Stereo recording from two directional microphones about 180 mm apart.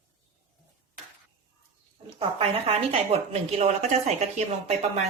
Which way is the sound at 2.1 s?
35° right (ahead or behind).